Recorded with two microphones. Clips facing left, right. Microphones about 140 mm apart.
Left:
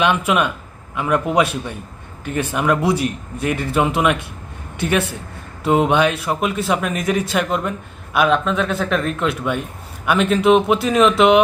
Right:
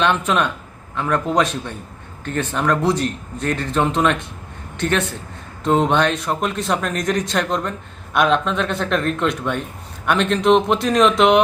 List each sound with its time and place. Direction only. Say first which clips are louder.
0.0 s a man's voice: left 1 dB; 10° left (ahead or behind)